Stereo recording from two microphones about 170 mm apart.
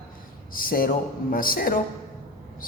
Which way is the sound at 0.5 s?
55° left (ahead or behind).